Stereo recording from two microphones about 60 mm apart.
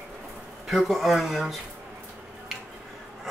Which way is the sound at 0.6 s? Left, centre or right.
Centre.